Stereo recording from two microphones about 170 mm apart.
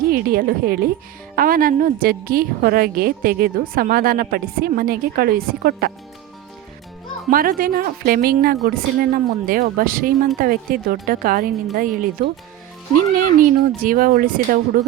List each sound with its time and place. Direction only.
0.1 s a woman's voice: 60° right (ahead or behind)
7.3 s a woman's voice: 55° right (ahead or behind)
13.4 s a woman's voice: 55° right (ahead or behind)